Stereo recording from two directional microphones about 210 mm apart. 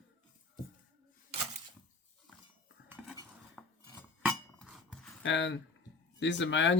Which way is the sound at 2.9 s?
5° right (ahead or behind).